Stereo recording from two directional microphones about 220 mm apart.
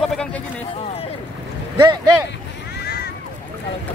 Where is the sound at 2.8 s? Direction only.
45° left (ahead or behind).